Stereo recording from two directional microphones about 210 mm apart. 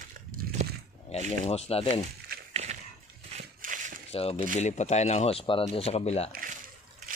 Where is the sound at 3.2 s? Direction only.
35° right (ahead or behind).